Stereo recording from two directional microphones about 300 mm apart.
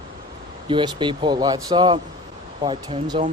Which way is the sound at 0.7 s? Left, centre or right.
Centre.